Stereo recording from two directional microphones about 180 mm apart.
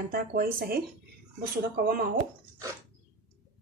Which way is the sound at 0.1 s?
55° right (ahead or behind).